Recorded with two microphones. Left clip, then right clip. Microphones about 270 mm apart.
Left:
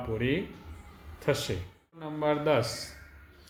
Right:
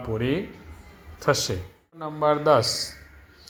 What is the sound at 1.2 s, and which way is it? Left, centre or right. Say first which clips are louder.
A man's voice: right 6 dB; centre.